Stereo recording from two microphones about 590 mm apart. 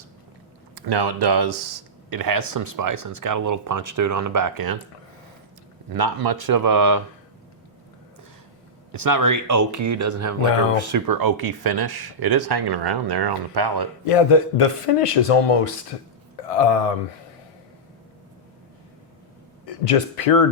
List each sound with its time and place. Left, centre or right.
0.8 s speech: right
5.9 s speech: right
9.0 s speech: right
14.0 s speech: left
19.6 s speech: left